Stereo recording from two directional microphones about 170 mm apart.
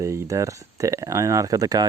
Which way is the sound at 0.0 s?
15° right (ahead or behind).